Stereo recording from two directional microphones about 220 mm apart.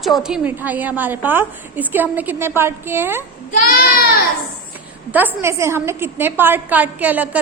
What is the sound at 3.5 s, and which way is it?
Speech, 40° left (ahead or behind).